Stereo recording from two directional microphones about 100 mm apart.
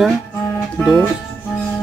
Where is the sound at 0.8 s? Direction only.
20° left (ahead or behind).